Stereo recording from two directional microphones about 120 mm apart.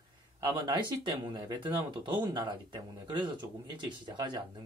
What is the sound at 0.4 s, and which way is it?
Speech, 35° right (ahead or behind).